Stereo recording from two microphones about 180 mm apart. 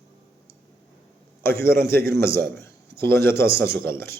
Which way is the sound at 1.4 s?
15° left (ahead or behind).